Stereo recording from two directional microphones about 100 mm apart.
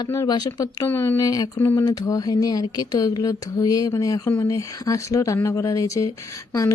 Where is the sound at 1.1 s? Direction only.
35° left (ahead or behind).